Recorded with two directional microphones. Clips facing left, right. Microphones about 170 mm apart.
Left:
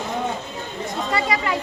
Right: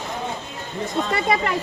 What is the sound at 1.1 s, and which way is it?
Speech, 50° right (ahead or behind).